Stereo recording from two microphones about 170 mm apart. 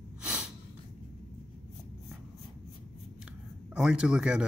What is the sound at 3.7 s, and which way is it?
Speech, 5° right (ahead or behind).